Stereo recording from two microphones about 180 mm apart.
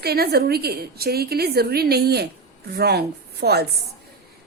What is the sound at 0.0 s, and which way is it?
A woman's voice, 60° right (ahead or behind).